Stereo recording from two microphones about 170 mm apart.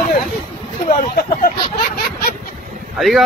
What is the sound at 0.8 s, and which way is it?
Hubbub, 55° left (ahead or behind).